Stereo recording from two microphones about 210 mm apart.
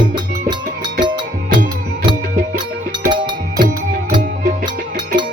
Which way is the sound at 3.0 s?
20° right (ahead or behind).